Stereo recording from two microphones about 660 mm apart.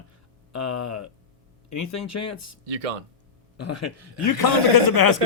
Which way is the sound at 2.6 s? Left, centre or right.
Right.